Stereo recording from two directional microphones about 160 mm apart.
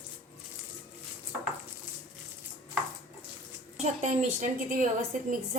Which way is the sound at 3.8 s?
50° right (ahead or behind).